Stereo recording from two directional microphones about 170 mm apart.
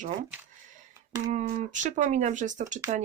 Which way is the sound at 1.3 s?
50° right (ahead or behind).